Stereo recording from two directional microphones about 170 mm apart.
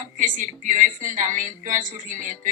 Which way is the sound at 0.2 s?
50° right (ahead or behind).